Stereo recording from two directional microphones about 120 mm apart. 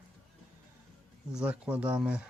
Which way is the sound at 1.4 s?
10° right (ahead or behind).